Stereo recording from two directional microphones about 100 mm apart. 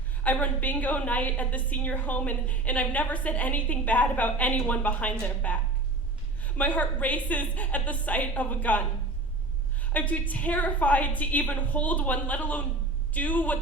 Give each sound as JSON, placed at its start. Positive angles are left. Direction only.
{"t": 0.2, "sound": "a woman's voice", "side_deg": 15}
{"t": 9.8, "sound": "a woman's voice", "side_deg": 15}